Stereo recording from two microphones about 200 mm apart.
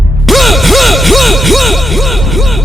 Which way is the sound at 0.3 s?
Centre (ahead or behind).